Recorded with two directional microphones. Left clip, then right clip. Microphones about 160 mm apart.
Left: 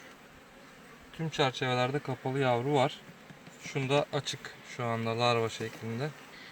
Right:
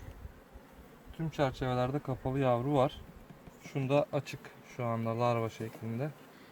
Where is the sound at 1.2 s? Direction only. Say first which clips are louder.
Left 3 dB; 20° right (ahead or behind).